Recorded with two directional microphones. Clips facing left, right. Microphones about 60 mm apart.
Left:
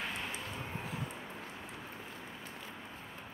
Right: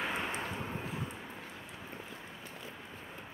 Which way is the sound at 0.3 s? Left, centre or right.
Right.